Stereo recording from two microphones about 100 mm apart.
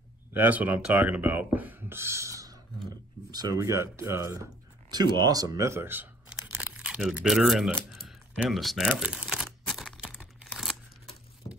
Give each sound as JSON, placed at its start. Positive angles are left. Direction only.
{"t": 0.3, "sound": "speech", "side_deg": -15}
{"t": 4.9, "sound": "speech", "side_deg": -45}
{"t": 6.2, "sound": "tearing", "side_deg": -10}
{"t": 7.9, "sound": "typing", "side_deg": 0}
{"t": 8.9, "sound": "typewriter", "side_deg": -10}
{"t": 10.4, "sound": "tearing", "side_deg": 0}